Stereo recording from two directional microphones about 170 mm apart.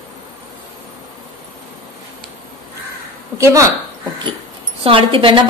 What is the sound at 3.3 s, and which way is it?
Speech, 20° right (ahead or behind).